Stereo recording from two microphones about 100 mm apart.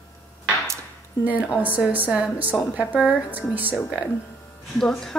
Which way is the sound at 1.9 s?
15° right (ahead or behind).